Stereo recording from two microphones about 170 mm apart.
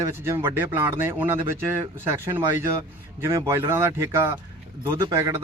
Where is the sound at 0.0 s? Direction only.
15° right (ahead or behind).